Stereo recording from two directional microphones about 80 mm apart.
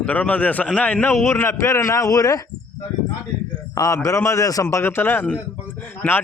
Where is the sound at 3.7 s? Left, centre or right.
Left.